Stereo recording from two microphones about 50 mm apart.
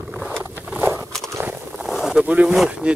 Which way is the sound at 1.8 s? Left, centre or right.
Centre.